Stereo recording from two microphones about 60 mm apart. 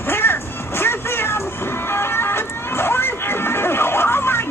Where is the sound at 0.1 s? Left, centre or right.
Left.